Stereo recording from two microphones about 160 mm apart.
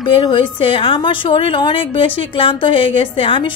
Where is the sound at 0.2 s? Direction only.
30° left (ahead or behind).